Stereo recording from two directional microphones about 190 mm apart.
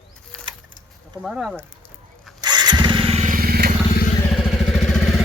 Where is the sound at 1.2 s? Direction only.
Centre (ahead or behind).